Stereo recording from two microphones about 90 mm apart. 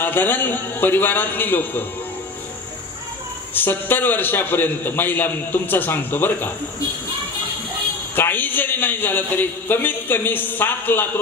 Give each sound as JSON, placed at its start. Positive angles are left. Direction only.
{"t": 0.0, "sound": "a man's voice", "side_deg": 20}
{"t": 3.5, "sound": "a man's voice", "side_deg": 20}
{"t": 8.2, "sound": "a man's voice", "side_deg": 20}